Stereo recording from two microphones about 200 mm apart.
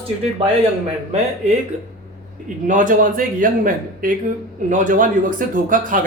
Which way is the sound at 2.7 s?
40° right (ahead or behind).